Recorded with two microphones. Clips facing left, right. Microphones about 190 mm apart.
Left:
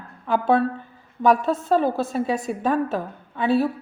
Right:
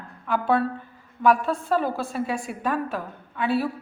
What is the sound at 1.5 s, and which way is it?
Speech, 40° left (ahead or behind).